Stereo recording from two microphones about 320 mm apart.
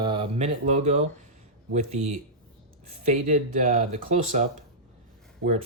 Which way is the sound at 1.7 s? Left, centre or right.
Right.